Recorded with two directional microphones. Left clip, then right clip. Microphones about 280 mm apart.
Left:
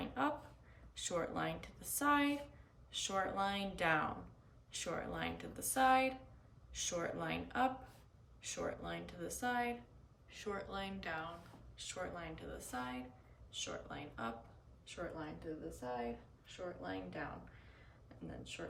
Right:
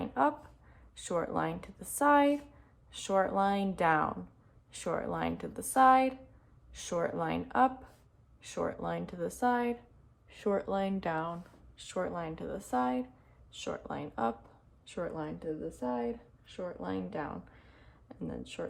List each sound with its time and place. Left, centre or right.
0.0 s a sound: centre
0.9 s speech: centre
16.5 s speech: centre